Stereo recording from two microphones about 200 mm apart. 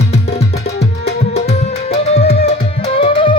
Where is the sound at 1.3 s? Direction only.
30° left (ahead or behind).